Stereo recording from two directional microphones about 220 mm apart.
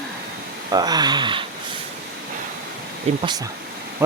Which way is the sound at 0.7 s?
20° right (ahead or behind).